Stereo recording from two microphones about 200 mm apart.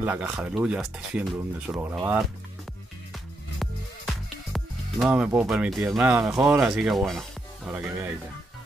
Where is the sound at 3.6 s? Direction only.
Centre (ahead or behind).